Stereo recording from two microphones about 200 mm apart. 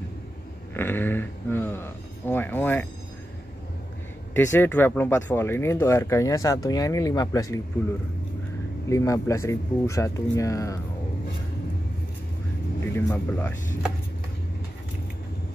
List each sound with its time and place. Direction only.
0.7 s a sound: 10° left (ahead or behind)
4.3 s speech: 10° left (ahead or behind)
8.8 s speech: 15° left (ahead or behind)
12.8 s speech: 10° left (ahead or behind)